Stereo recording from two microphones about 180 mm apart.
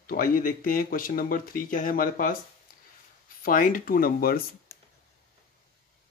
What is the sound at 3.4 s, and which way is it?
Speech, 50° left (ahead or behind).